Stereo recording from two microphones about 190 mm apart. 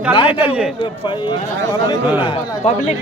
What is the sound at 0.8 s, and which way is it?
Speech, 25° left (ahead or behind).